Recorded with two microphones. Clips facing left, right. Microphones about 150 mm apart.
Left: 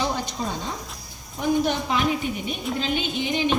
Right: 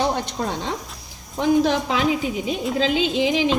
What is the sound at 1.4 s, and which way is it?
A woman's voice, 90° right.